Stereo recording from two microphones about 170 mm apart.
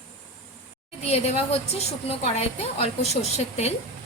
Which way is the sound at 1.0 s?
40° left (ahead or behind).